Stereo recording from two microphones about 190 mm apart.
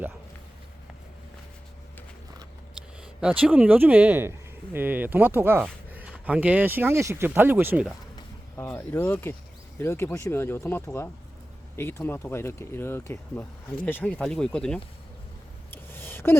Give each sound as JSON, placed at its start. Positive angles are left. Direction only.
{"t": 3.2, "sound": "speech", "side_deg": -5}
{"t": 8.5, "sound": "speech", "side_deg": 10}
{"t": 15.7, "sound": "a sound", "side_deg": 10}